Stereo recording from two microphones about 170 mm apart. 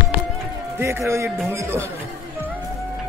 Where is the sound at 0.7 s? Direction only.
15° right (ahead or behind).